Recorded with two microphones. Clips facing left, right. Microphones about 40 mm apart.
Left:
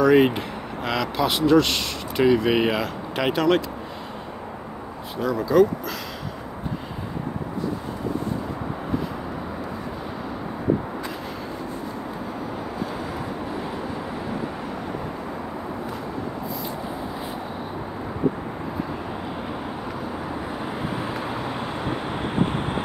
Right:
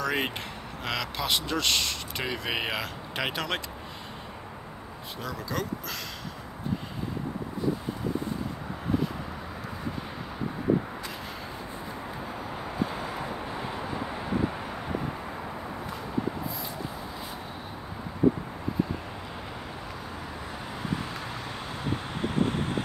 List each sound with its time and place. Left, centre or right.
0.0 s speech: centre
5.2 s speech: centre
21.0 s vehicle: centre